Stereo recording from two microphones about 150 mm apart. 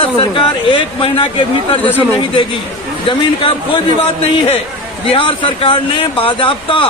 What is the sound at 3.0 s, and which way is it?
A man's voice, 35° left (ahead or behind).